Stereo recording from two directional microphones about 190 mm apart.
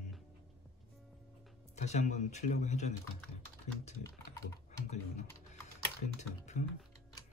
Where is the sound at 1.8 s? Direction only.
40° left (ahead or behind).